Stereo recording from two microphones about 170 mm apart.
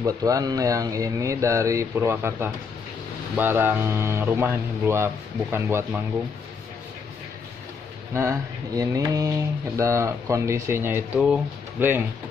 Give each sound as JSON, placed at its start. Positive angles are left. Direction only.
{"t": 0.0, "sound": "speech", "side_deg": -20}
{"t": 8.1, "sound": "speech", "side_deg": -15}